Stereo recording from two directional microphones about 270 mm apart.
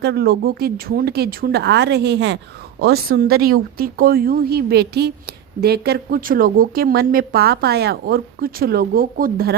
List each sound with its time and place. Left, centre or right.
0.0 s speech: right